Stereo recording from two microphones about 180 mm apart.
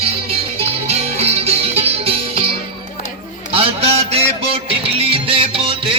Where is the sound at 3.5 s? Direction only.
30° right (ahead or behind).